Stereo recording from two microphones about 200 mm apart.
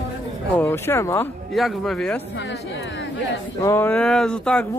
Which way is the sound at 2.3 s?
65° left (ahead or behind).